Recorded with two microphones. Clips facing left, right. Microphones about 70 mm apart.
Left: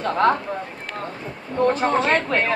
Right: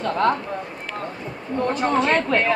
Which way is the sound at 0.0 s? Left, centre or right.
Centre.